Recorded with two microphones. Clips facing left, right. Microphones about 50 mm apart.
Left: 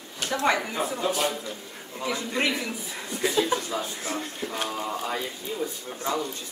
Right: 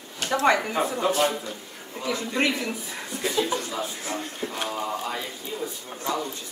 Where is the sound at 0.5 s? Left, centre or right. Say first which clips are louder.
Right 3 dB; centre.